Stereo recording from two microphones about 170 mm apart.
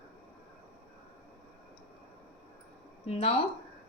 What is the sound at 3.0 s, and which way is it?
Speech, 35° left (ahead or behind).